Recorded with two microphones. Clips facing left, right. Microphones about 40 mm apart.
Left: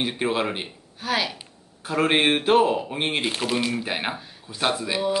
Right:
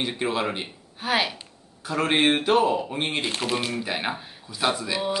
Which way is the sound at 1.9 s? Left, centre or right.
Centre.